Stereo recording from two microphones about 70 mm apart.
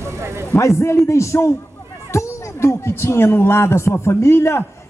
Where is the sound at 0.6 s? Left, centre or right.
Left.